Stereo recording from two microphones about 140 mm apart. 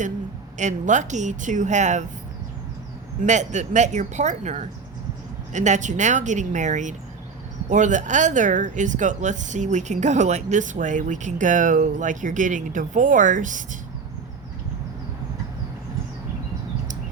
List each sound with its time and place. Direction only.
0.6 s speech: 60° right (ahead or behind)
3.2 s speech: 60° right (ahead or behind)